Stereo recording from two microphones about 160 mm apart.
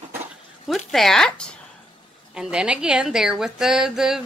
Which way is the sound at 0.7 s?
Centre (ahead or behind).